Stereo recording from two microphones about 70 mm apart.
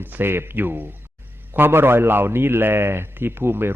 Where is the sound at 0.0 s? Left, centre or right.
Right.